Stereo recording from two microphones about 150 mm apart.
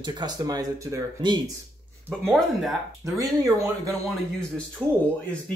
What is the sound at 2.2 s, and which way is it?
Speech, centre (ahead or behind).